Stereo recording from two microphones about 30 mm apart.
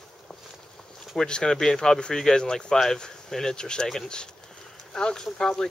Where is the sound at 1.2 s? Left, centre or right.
Left.